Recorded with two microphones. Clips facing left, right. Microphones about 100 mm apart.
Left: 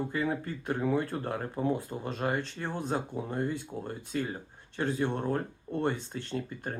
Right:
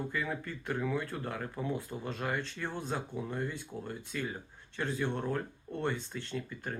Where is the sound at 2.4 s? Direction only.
45° left (ahead or behind).